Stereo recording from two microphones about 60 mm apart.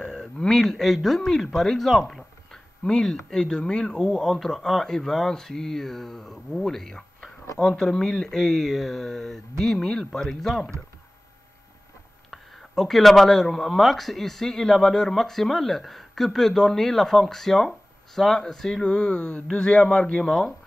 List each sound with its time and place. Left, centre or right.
0.0 s speech: centre
12.3 s speech: centre
20.2 s speech: centre